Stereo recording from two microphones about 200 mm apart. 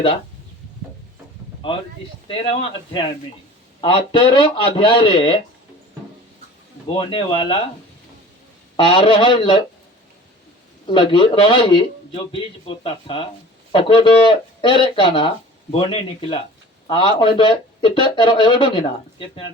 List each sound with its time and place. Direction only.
1.6 s speech: 25° left (ahead or behind)
7.1 s speech: 25° left (ahead or behind)
8.7 s speech: 25° left (ahead or behind)
10.8 s speech: 25° left (ahead or behind)